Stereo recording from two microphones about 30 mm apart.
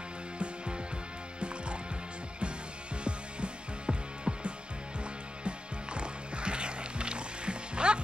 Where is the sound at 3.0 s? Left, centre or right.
Right.